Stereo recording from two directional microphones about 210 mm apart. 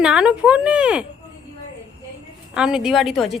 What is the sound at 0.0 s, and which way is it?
A woman's voice, 5° right (ahead or behind).